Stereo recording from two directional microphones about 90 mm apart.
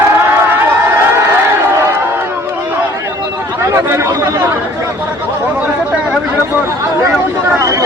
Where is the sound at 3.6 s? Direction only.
30° right (ahead or behind).